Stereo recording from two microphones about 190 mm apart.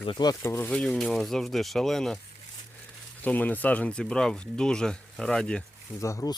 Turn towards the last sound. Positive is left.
turn(degrees=15)  # may be behind; listen again after turning